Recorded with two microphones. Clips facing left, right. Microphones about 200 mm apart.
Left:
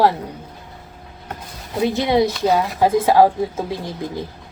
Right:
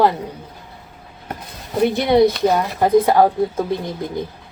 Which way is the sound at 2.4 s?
5° left (ahead or behind).